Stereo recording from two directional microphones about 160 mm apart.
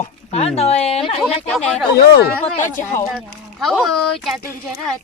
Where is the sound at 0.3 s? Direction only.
40° left (ahead or behind).